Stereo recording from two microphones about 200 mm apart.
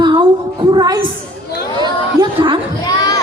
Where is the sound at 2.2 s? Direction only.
25° right (ahead or behind).